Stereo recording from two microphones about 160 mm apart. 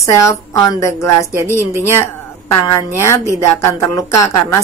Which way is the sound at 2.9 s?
15° left (ahead or behind).